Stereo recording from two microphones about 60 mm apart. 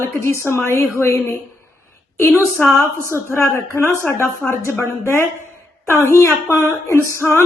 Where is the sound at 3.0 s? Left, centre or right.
Left.